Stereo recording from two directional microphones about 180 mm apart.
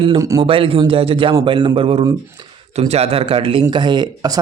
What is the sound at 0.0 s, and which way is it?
Speech, 20° right (ahead or behind).